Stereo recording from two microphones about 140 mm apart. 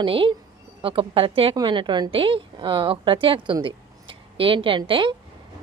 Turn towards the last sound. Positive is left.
turn(degrees=-35)  # may be behind; listen again after turning